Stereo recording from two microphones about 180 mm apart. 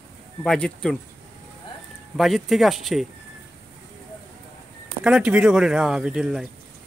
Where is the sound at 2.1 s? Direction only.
Centre (ahead or behind).